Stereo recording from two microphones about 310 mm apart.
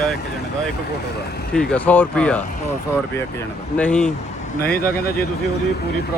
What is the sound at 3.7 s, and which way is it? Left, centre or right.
Speech, centre.